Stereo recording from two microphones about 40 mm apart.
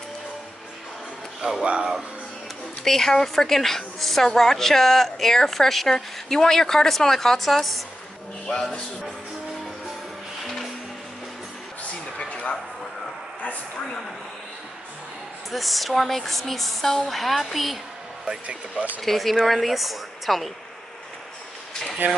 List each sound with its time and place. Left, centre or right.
1.6 s speech: right
2.8 s a woman's voice: centre
10.4 s music: centre
15.5 s speech: centre
18.2 s speech: right
18.9 s speech: centre
22.0 s speech: right